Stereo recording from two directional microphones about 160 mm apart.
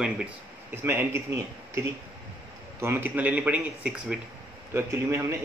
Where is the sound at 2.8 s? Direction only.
15° right (ahead or behind).